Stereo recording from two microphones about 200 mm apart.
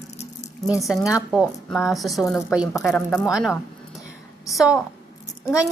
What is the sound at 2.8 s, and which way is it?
Speech, 10° left (ahead or behind).